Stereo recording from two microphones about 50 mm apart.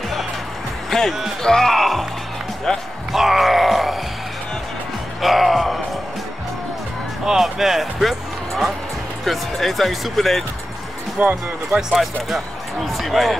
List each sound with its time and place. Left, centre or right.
0.8 s music: centre
1.4 s speech: centre
3.1 s groan: centre
5.2 s music: centre
7.2 s speech: centre
11.1 s speech: right
11.9 s speech: centre